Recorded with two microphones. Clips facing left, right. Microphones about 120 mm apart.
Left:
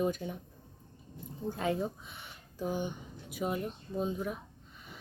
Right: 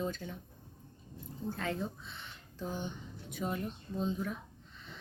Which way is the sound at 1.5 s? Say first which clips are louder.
Left 5 dB; 15° left (ahead or behind).